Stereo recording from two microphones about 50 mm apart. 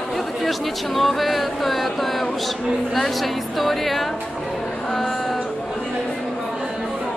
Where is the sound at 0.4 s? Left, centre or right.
Centre.